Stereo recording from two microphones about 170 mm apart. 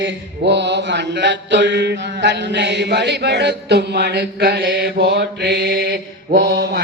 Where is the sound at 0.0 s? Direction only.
90° right.